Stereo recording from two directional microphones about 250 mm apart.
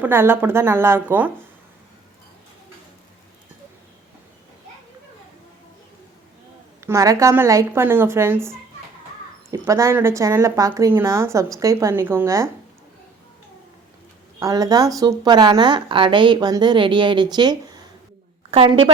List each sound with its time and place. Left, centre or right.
0.0 s speech: centre
6.8 s speech: centre
14.3 s a woman's voice: centre